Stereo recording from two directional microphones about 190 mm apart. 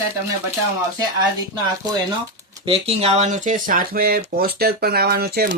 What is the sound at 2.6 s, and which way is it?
Speech, 30° right (ahead or behind).